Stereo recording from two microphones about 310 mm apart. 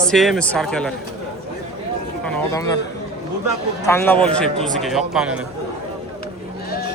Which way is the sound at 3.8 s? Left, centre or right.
Centre.